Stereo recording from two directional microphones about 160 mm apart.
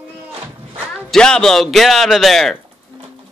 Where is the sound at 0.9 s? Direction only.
5° left (ahead or behind).